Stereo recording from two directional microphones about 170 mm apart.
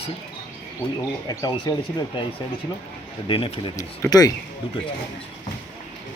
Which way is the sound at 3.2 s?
30° left (ahead or behind).